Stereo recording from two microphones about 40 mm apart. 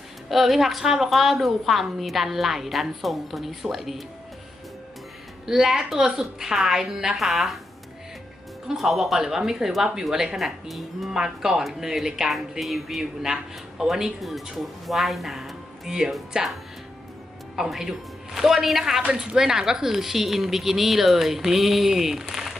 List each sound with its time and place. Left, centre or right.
0.3 s a woman's voice: centre
5.5 s speech: centre
8.6 s speech: centre
11.1 s speech: centre
12.3 s a woman's voice: centre
13.0 s a woman's voice: centre
15.9 s speech: centre
16.3 s speech: right
17.6 s speech: centre